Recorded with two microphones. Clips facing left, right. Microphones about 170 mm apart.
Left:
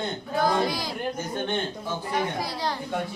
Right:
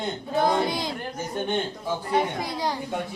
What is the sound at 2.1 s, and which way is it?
Speech, 25° right (ahead or behind).